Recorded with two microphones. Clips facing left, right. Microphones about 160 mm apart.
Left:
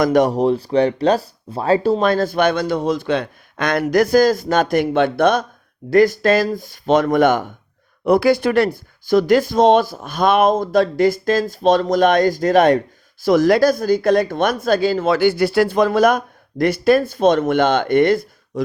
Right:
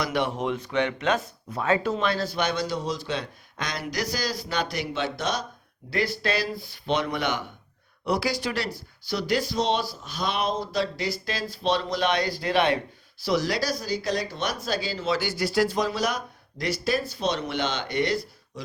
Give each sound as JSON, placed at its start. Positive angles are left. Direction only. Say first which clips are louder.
{"t": 0.0, "sound": "speech", "louder": "left 12 dB", "side_deg": 45}
{"t": 2.0, "sound": "a man's voice", "louder": "left 10 dB", "side_deg": 50}